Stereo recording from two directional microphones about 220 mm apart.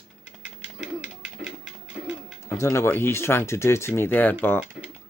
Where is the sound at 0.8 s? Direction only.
5° right (ahead or behind).